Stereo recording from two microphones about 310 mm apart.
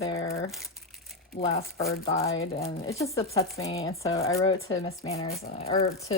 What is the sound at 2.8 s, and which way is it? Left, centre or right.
A woman's voice, centre.